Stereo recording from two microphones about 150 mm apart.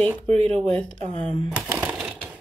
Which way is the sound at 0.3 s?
45° right (ahead or behind).